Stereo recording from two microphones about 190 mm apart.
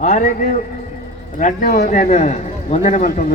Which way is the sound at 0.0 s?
40° left (ahead or behind).